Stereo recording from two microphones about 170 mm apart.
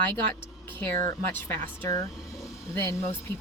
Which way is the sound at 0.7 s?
15° left (ahead or behind).